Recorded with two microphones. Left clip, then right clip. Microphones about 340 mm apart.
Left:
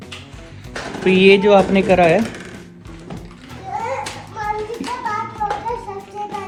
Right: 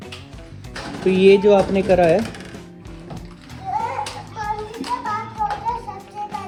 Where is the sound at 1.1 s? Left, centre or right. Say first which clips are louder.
Left 2 dB; centre.